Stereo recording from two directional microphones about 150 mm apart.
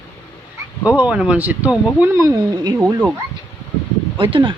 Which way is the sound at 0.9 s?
10° right (ahead or behind).